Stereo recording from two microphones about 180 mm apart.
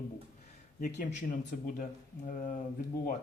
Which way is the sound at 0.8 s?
60° left (ahead or behind).